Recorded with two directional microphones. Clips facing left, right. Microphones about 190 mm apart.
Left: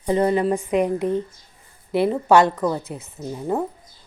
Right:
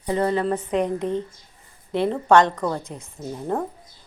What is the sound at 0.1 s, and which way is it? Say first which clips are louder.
Speech: left 3 dB; 15° left (ahead or behind).